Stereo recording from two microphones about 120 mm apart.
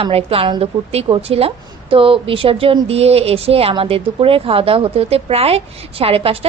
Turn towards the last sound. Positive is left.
turn(degrees=-50)  # may be behind; listen again after turning